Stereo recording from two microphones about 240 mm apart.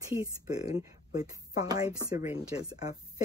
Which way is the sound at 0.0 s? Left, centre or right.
Centre.